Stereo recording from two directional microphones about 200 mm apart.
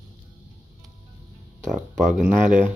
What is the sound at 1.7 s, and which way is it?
Speech, centre (ahead or behind).